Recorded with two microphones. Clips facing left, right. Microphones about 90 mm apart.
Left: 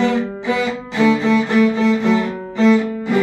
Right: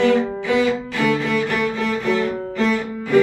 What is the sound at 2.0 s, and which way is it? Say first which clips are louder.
Cello: left 3 dB; 20° left (ahead or behind).